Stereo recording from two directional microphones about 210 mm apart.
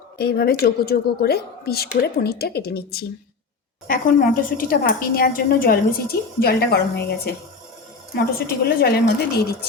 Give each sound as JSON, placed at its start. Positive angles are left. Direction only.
{"t": 0.2, "sound": "a woman's voice", "side_deg": 50}
{"t": 8.1, "sound": "a woman's voice", "side_deg": 50}